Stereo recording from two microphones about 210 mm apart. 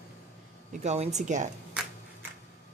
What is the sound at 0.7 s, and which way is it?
Speech, 35° right (ahead or behind).